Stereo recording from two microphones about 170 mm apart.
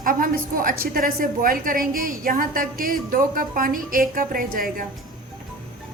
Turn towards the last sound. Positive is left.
turn(degrees=-55)  # may be behind; listen again after turning